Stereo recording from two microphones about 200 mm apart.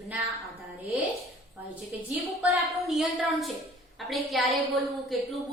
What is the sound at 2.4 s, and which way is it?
Speech, centre (ahead or behind).